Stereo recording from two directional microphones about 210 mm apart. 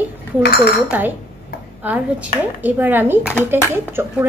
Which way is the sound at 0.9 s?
10° right (ahead or behind).